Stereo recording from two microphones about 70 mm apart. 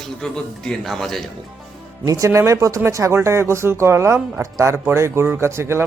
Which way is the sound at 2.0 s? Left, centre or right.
Right.